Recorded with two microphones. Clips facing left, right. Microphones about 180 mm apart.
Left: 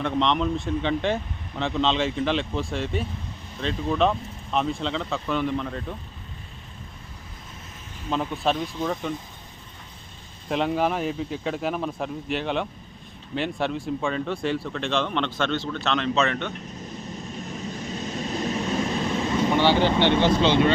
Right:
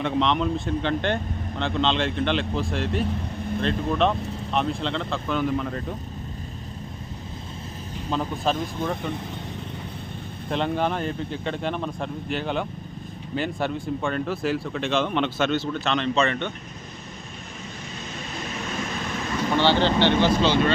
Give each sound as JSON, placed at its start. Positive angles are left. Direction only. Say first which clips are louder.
{"t": 0.0, "sound": "speech", "louder": "even", "side_deg": 0}
{"t": 8.1, "sound": "speech", "louder": "even", "side_deg": 0}
{"t": 10.5, "sound": "speech", "louder": "left 1 dB", "side_deg": 5}
{"t": 17.5, "sound": "vehicle", "louder": "left 6 dB", "side_deg": 40}